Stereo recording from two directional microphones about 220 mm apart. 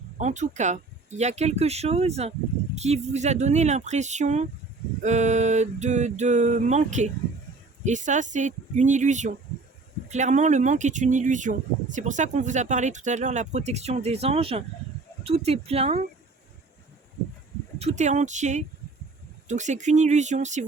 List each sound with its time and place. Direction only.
0.2 s speech: 30° right (ahead or behind)
17.7 s speech: 30° right (ahead or behind)